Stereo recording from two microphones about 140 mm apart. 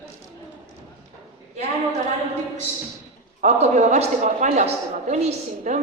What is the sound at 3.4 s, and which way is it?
A man's voice, 55° right (ahead or behind).